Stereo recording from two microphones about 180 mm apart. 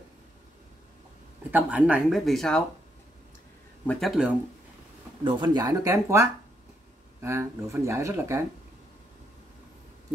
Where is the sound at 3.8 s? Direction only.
Centre (ahead or behind).